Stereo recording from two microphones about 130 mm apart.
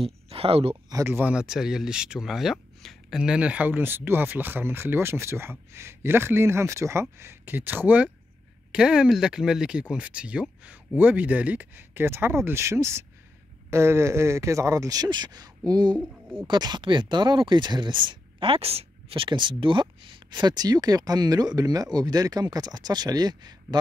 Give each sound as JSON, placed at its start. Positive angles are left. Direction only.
{"t": 0.0, "sound": "speech", "side_deg": -50}
{"t": 0.8, "sound": "speech", "side_deg": -25}
{"t": 1.1, "sound": "speech", "side_deg": -10}